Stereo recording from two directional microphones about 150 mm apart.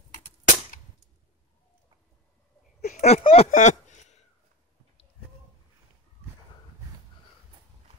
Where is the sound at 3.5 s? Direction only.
50° left (ahead or behind).